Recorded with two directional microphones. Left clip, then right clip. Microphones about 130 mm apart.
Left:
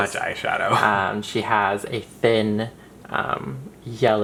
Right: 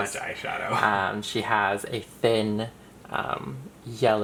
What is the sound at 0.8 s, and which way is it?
Speech, 15° right (ahead or behind).